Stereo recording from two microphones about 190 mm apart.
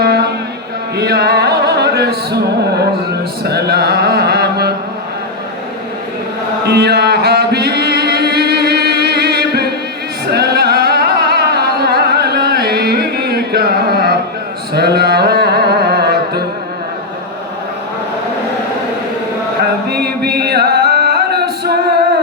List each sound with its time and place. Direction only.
0.0 s mantra: 55° right (ahead or behind)
0.9 s music: 60° right (ahead or behind)
3.4 s speech: 60° right (ahead or behind)
6.7 s music: 60° right (ahead or behind)
19.9 s music: 55° right (ahead or behind)